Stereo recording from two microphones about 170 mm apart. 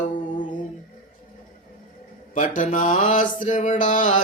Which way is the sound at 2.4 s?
50° left (ahead or behind).